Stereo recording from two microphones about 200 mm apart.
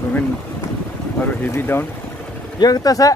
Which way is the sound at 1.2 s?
10° left (ahead or behind).